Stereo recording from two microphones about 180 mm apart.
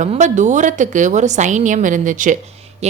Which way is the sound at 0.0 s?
40° right (ahead or behind).